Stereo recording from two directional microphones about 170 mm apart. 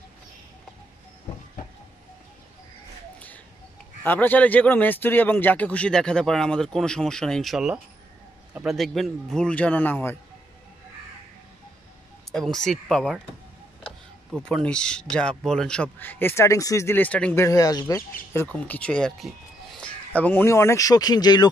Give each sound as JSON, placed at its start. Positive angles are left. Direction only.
{"t": 4.0, "sound": "speech", "side_deg": 10}
{"t": 12.3, "sound": "speech", "side_deg": 5}
{"t": 14.4, "sound": "speech", "side_deg": 5}
{"t": 17.5, "sound": "speech", "side_deg": 20}